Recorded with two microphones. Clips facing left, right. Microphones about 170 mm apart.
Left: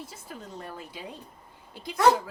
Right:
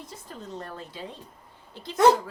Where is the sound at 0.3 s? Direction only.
10° left (ahead or behind).